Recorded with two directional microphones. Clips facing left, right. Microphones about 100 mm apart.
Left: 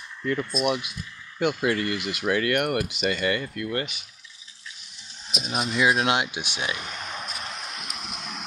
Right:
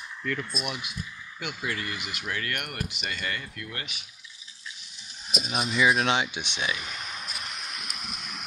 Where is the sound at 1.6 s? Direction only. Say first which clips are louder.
Left 8 dB; 55° left (ahead or behind).